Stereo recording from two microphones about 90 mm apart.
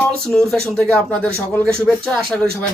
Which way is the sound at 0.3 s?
5° left (ahead or behind).